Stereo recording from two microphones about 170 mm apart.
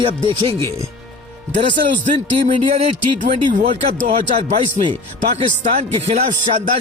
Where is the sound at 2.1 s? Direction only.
35° right (ahead or behind).